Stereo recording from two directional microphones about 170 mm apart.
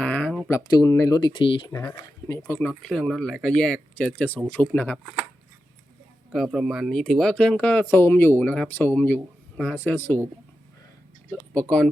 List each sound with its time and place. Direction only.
0.0 s a sound: 10° left (ahead or behind)
0.4 s speech: 20° left (ahead or behind)
1.7 s speech: 15° left (ahead or behind)
2.6 s speech: 5° left (ahead or behind)
6.3 s speech: centre (ahead or behind)